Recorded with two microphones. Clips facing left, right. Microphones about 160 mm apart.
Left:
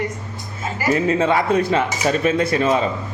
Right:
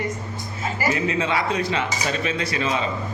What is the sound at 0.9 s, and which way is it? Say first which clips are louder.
A man's voice: left 9 dB; 45° left (ahead or behind).